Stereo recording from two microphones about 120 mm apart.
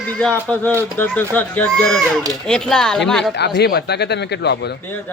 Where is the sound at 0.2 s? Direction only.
10° left (ahead or behind).